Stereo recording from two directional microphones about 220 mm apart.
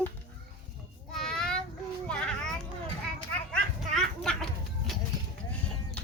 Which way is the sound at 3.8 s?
Centre (ahead or behind).